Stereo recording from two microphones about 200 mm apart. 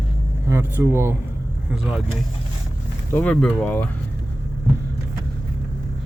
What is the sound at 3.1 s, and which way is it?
Speech, 5° left (ahead or behind).